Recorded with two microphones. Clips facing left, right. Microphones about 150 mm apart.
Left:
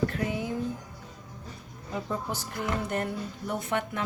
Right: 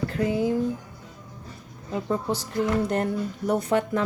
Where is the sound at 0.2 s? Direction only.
35° right (ahead or behind).